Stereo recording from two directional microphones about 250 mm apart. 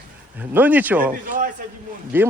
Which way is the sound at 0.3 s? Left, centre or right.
Centre.